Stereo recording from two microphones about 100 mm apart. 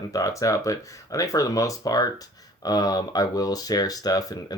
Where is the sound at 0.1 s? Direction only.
35° left (ahead or behind).